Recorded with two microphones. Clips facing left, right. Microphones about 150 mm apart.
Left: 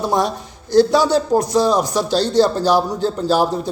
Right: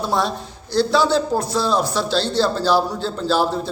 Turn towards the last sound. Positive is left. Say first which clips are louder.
# left 2 dB
turn(degrees=15)  # may be behind; listen again after turning